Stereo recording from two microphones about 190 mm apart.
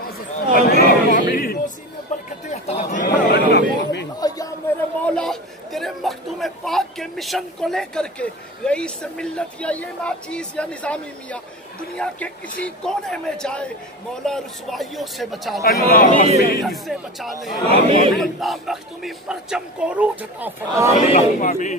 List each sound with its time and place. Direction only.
0.6 s a sound: 55° left (ahead or behind)
1.3 s music: 50° left (ahead or behind)
2.1 s music: 40° left (ahead or behind)
2.4 s speech: 35° left (ahead or behind)
3.1 s chatter: 65° left (ahead or behind)
5.0 s a man's voice: 5° left (ahead or behind)
15.6 s speech: 50° left (ahead or behind)
16.6 s a man's voice: centre (ahead or behind)
17.6 s speech: 30° right (ahead or behind)
18.1 s a man's voice: centre (ahead or behind)
21.1 s a man's voice: 35° left (ahead or behind)